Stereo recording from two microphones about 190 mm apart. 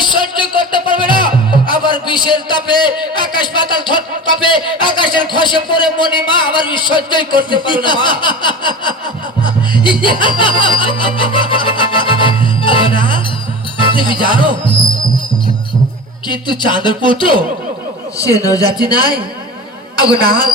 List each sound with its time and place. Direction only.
0.0 s music: 25° left (ahead or behind)
1.7 s a man's voice: 25° left (ahead or behind)
9.4 s music: 25° left (ahead or behind)
16.3 s speech: 25° left (ahead or behind)
20.2 s speech: 20° left (ahead or behind)